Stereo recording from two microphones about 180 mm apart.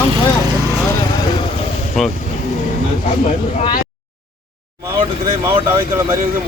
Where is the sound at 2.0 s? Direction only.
Centre (ahead or behind).